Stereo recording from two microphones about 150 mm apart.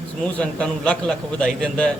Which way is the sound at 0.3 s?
10° left (ahead or behind).